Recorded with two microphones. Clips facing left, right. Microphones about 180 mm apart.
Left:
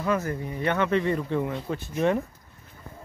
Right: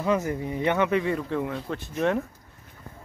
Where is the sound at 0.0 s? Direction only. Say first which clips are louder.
Right 2 dB; 15° right (ahead or behind); by 2.2 s centre (ahead or behind).